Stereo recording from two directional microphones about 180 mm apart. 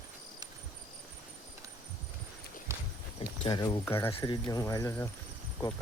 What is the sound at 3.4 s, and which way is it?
Speech, 20° left (ahead or behind).